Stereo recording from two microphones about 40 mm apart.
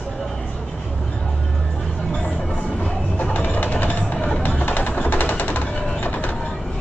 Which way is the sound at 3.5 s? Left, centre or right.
Left.